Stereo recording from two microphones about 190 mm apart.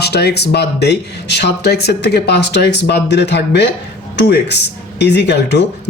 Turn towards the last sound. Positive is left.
turn(degrees=60)  # may be behind; listen again after turning